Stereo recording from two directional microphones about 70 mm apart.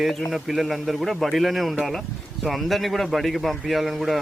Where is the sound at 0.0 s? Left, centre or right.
Centre.